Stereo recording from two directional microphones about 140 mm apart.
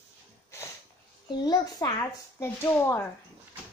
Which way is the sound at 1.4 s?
25° left (ahead or behind).